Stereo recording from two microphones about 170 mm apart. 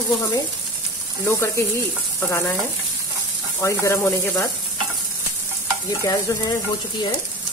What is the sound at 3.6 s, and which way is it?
Frying, 15° left (ahead or behind).